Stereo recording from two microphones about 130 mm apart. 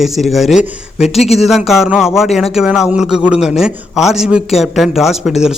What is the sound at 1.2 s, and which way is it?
Speech, 55° left (ahead or behind).